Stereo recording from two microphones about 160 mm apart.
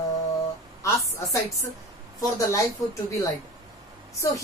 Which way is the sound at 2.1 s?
20° left (ahead or behind).